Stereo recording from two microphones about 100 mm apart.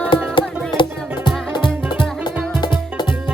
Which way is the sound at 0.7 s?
50° left (ahead or behind).